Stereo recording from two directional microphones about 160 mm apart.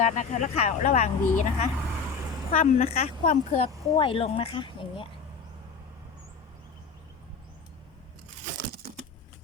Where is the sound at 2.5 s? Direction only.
60° left (ahead or behind).